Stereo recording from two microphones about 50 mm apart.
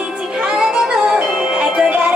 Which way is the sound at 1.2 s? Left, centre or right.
Centre.